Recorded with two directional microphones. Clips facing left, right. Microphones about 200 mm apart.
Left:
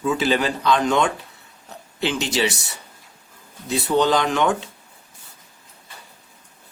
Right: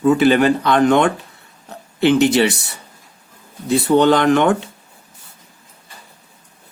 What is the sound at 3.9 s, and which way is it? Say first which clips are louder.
Speech: right 6 dB; 60° right (ahead or behind).